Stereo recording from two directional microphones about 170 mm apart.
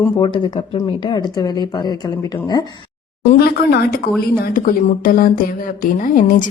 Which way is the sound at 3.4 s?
65° left (ahead or behind).